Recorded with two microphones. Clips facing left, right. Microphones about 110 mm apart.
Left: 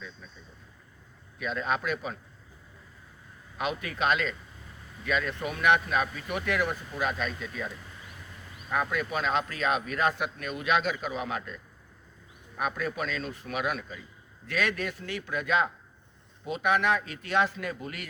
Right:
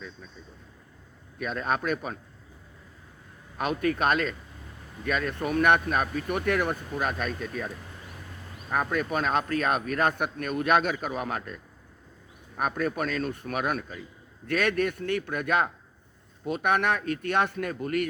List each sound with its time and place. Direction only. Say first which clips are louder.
1.4 s speech: right 1 dB; 45° right (ahead or behind)
3.6 s speech: right 4 dB; 45° right (ahead or behind)
8.7 s speech: right 2 dB; 40° right (ahead or behind)
12.5 s speech: right 3 dB; 45° right (ahead or behind)